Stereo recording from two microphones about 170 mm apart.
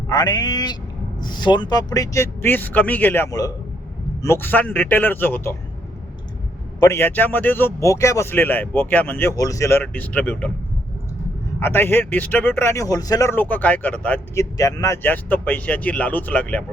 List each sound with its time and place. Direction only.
0.1 s a man's voice: 25° left (ahead or behind)
6.7 s a man's voice: 15° left (ahead or behind)
11.6 s a man's voice: 15° left (ahead or behind)
14.6 s a man's voice: 20° left (ahead or behind)